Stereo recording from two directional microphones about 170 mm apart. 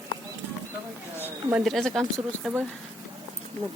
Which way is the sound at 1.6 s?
Centre (ahead or behind).